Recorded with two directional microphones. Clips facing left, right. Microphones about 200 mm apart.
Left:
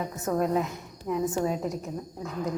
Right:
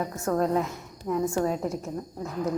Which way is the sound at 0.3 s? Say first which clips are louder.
Right 1 dB; 10° left (ahead or behind).